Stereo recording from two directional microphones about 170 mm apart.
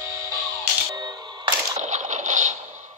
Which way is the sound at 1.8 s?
45° right (ahead or behind).